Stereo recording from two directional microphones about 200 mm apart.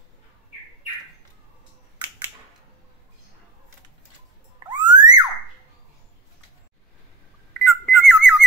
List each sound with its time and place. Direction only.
4.6 s music: 20° right (ahead or behind)
7.6 s whistle: centre (ahead or behind)